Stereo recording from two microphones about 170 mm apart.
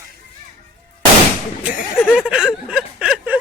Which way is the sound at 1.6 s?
5° right (ahead or behind).